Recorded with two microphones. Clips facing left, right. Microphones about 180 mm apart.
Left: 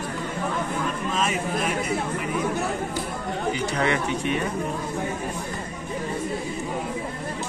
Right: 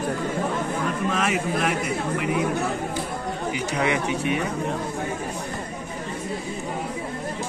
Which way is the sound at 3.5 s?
10° right (ahead or behind).